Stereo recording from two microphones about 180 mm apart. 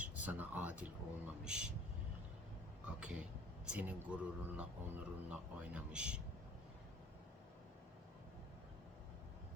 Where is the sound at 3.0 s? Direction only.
5° right (ahead or behind).